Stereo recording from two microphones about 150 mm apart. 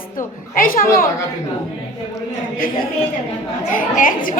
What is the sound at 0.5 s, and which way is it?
Speech, 65° left (ahead or behind).